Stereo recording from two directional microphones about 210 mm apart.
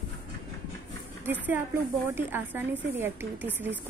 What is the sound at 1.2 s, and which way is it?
A woman's voice, 10° right (ahead or behind).